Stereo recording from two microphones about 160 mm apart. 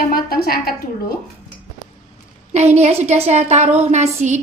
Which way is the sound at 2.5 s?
45° right (ahead or behind).